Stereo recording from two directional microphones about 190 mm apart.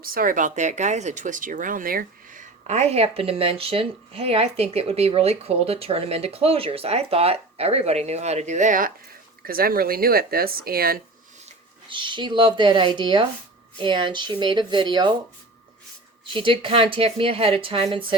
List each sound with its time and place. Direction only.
0.0 s speech: 50° right (ahead or behind)
11.9 s speech: 25° right (ahead or behind)
16.3 s speech: 25° right (ahead or behind)